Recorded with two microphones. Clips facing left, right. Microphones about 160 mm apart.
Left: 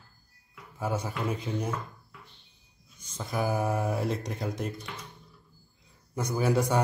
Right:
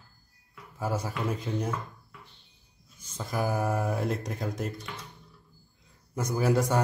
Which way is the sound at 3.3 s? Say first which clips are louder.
Even; centre (ahead or behind).